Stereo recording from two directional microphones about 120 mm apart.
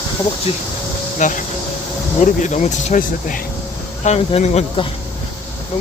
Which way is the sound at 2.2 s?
80° left.